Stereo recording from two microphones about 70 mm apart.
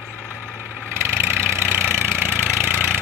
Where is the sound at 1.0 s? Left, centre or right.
Right.